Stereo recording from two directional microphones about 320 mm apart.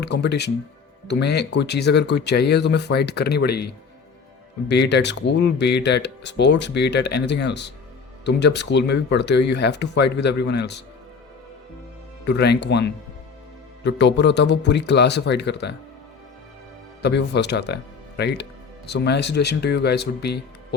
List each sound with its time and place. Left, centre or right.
0.0 s speech: left
4.7 s speech: left
12.2 s speech: left
17.0 s speech: left